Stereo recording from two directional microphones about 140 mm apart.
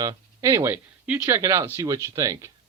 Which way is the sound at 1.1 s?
10° right (ahead or behind).